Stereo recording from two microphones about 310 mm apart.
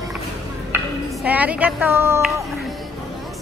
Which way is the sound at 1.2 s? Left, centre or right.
Centre.